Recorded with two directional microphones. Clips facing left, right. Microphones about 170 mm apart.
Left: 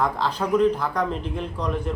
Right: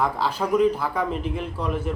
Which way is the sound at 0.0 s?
5° right (ahead or behind).